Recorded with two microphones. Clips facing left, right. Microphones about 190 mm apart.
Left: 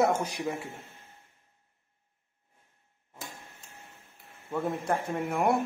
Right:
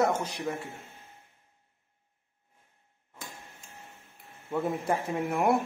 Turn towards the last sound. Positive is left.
turn(degrees=0)  # may be behind; listen again after turning